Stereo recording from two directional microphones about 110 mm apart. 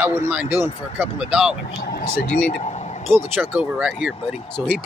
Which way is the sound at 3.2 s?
15° right (ahead or behind).